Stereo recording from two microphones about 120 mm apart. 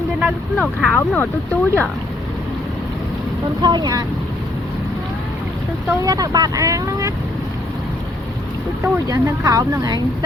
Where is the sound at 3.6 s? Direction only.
35° right (ahead or behind).